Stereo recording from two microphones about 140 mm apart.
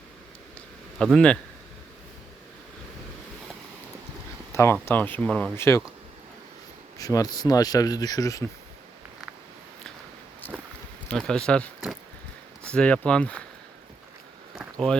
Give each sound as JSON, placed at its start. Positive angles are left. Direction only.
{"t": 0.9, "sound": "speech", "side_deg": 5}
{"t": 4.5, "sound": "speech", "side_deg": 20}
{"t": 5.5, "sound": "speech", "side_deg": 20}
{"t": 7.0, "sound": "speech", "side_deg": 25}
{"t": 10.4, "sound": "a sound", "side_deg": 15}
{"t": 11.1, "sound": "speech", "side_deg": 5}
{"t": 12.7, "sound": "speech", "side_deg": 5}